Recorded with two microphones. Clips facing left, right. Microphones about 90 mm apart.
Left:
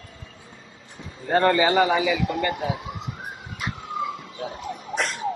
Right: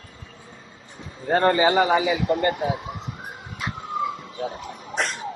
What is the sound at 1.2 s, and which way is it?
A man's voice, 30° right (ahead or behind).